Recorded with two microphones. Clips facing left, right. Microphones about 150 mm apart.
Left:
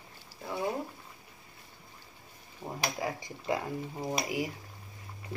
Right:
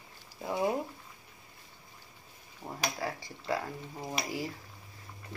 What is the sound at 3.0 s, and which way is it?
Speech, 15° left (ahead or behind).